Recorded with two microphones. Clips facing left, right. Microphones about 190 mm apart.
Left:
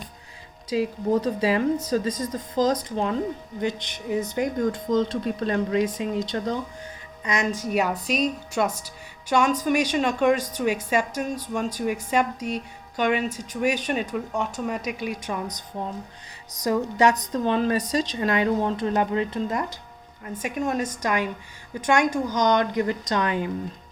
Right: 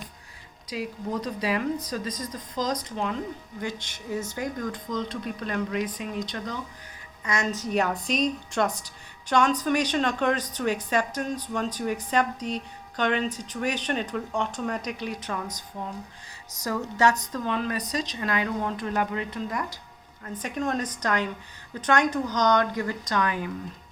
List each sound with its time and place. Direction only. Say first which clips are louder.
0.7 s speech: left 8 dB; 30° left (ahead or behind)
3.6 s speech: left 6 dB; 20° left (ahead or behind)
7.3 s a woman's voice: left 2 dB; 15° left (ahead or behind)
16.6 s speech: left 4 dB; 20° left (ahead or behind)
20.2 s a woman's voice: left 2 dB; 10° left (ahead or behind); by 23.5 s 25° left (ahead or behind)